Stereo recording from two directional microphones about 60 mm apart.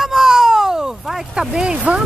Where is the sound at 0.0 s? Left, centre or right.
Centre.